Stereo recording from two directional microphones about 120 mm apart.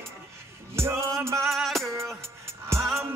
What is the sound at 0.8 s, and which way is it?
Music, 20° right (ahead or behind).